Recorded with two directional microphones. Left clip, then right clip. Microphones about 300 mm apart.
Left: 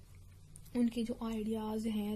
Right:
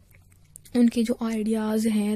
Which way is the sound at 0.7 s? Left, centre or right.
Right.